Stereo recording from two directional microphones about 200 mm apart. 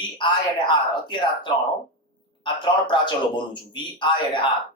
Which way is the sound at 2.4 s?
25° left (ahead or behind).